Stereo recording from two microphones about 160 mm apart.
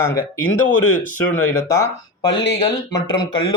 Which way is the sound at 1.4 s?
15° left (ahead or behind).